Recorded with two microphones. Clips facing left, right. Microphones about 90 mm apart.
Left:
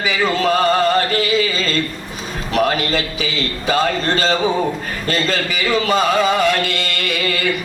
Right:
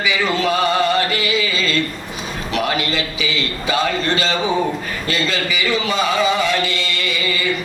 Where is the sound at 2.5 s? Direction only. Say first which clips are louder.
Left 4 dB; 40° left (ahead or behind).